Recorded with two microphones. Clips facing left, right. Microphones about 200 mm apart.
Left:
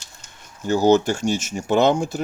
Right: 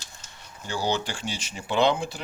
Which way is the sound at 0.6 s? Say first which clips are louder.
Left 12 dB; 45° left (ahead or behind).